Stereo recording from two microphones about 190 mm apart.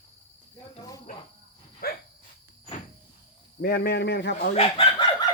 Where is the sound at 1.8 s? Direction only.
50° left (ahead or behind).